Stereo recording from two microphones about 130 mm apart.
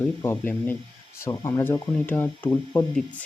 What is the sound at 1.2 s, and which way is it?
Speech, 25° left (ahead or behind).